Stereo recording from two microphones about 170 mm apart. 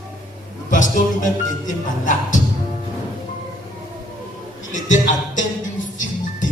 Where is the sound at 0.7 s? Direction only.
50° left (ahead or behind).